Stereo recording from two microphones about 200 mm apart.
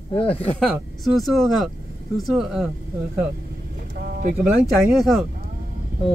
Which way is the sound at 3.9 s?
50° right (ahead or behind).